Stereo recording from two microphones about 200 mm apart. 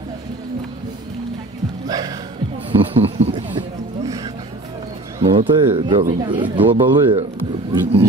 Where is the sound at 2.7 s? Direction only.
30° right (ahead or behind).